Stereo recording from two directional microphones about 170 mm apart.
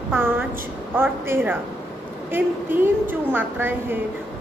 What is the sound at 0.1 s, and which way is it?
A woman's voice, 10° right (ahead or behind).